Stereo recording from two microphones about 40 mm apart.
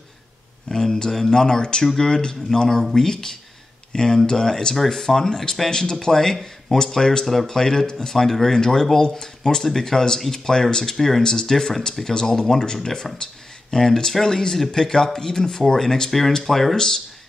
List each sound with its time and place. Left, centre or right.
0.7 s a sound: centre
1.3 s speech: centre
16.1 s speech: centre